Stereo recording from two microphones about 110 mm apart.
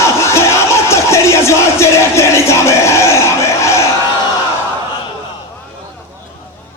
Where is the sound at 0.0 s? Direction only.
25° left (ahead or behind).